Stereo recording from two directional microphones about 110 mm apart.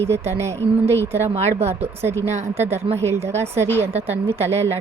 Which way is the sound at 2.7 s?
75° right (ahead or behind).